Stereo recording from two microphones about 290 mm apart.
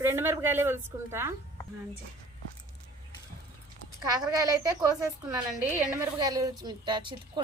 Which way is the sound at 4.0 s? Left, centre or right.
Centre.